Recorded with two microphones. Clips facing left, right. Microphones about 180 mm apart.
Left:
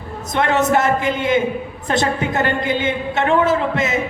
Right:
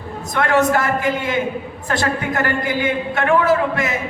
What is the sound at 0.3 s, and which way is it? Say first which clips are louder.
A woman's voice: even; 20° left (ahead or behind).